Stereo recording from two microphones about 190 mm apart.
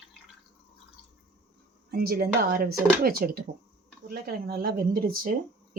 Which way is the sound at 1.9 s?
55° right (ahead or behind).